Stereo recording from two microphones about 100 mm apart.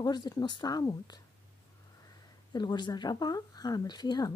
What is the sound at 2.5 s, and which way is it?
Speech, 45° left (ahead or behind).